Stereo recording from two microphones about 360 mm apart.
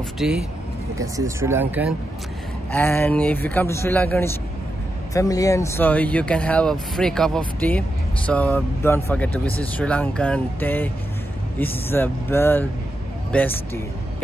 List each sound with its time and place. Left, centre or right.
0.2 s speech: centre